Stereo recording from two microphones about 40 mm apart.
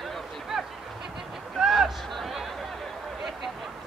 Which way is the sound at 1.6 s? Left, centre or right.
Centre.